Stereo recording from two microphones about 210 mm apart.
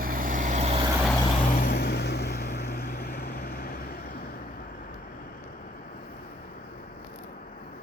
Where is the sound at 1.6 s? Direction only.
45° left (ahead or behind).